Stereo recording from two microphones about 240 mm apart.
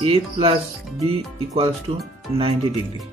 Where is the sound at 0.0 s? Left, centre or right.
Right.